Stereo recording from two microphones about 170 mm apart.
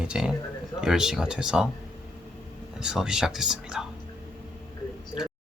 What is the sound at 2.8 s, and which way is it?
Speech, 5° right (ahead or behind).